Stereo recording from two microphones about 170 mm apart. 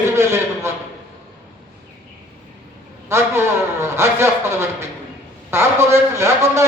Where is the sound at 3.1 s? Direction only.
15° right (ahead or behind).